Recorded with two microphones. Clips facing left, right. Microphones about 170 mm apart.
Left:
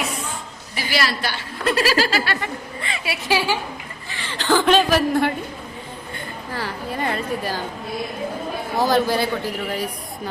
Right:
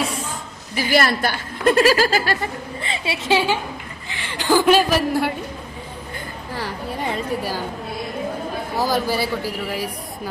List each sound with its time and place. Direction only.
0.8 s a woman's voice: 50° right (ahead or behind); by 5.3 s 10° right (ahead or behind)
6.5 s a woman's voice: 15° right (ahead or behind)
8.8 s a woman's voice: 10° right (ahead or behind)